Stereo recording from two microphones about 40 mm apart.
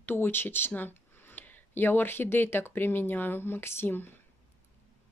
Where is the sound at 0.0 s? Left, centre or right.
Left.